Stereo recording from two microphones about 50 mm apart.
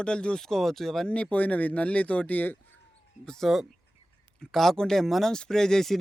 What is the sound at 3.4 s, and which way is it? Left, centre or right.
Speech, centre.